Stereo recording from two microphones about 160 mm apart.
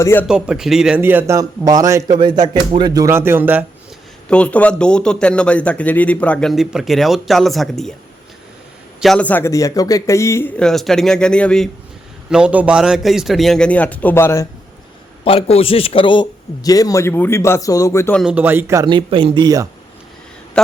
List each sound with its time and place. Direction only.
0.0 s speech: 15° left (ahead or behind)
0.3 s speech: 5° right (ahead or behind)
4.3 s speech: 5° left (ahead or behind)
9.0 s speech: 5° left (ahead or behind)
10.6 s a man's voice: centre (ahead or behind)
12.3 s a man's voice: 5° right (ahead or behind); by 14.4 s 15° left (ahead or behind)
15.2 s a man's voice: 35° left (ahead or behind); by 18.1 s 20° left (ahead or behind)
18.1 s a man's voice: centre (ahead or behind)
18.3 s speech: 15° right (ahead or behind)
18.9 s speech: 30° right (ahead or behind)